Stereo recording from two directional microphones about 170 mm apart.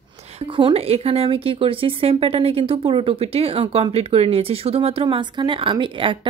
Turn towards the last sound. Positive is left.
turn(degrees=-30)  # may be behind; listen again after turning